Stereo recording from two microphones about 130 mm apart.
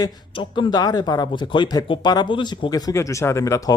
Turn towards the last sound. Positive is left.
turn(degrees=25)  # may be behind; listen again after turning